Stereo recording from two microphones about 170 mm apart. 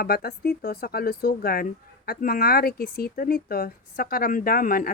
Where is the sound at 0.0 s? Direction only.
65° left (ahead or behind).